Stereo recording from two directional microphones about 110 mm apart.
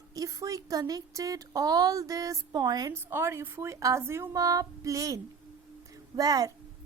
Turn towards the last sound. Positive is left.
turn(degrees=-35)  # may be behind; listen again after turning